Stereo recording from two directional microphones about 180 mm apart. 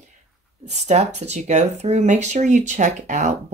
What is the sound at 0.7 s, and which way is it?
Speech, 40° right (ahead or behind).